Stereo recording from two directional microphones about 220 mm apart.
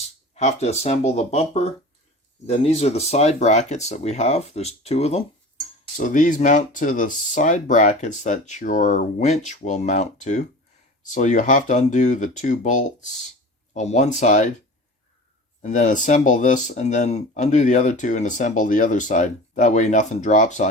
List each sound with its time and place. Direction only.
0.3 s speech: 30° left (ahead or behind)
15.6 s speech: 35° left (ahead or behind)